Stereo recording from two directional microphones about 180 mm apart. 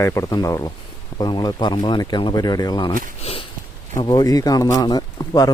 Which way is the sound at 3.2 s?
35° left (ahead or behind).